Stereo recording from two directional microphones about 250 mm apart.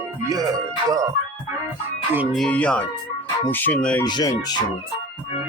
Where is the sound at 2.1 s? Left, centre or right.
Centre.